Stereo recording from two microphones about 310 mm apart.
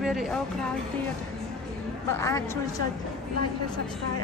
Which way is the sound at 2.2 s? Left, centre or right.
Centre.